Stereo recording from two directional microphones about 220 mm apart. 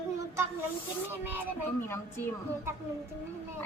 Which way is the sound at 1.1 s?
10° right (ahead or behind).